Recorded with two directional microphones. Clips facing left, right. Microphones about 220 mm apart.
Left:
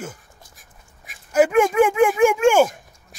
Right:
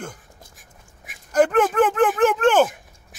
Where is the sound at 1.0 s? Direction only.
5° left (ahead or behind).